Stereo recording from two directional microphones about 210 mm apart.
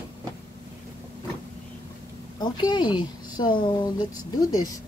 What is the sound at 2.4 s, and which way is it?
A woman's voice, 20° left (ahead or behind).